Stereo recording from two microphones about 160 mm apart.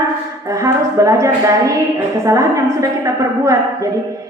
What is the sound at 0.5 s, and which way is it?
A woman's voice, 20° right (ahead or behind).